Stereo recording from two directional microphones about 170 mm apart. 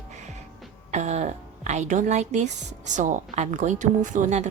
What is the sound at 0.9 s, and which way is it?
A woman's voice, 40° right (ahead or behind).